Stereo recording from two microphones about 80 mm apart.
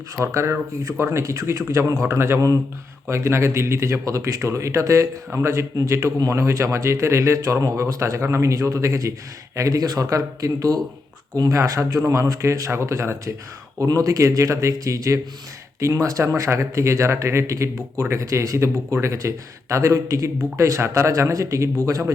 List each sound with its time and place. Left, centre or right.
0.2 s speech: right
13.7 s speech: right